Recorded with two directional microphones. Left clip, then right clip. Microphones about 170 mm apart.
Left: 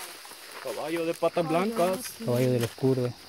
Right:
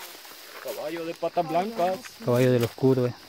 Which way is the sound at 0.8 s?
60° left (ahead or behind).